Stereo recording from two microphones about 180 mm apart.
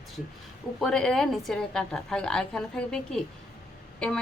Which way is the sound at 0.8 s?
Centre (ahead or behind).